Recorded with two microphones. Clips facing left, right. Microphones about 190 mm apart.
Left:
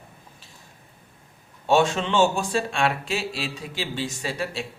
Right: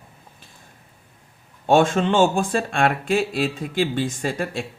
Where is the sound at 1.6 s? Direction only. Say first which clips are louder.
Right 4 dB; 50° right (ahead or behind).